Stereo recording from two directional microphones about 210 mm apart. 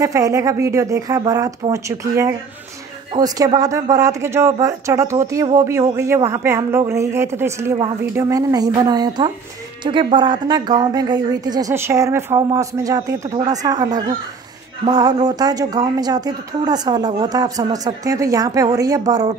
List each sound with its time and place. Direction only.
0.0 s speech: 15° right (ahead or behind)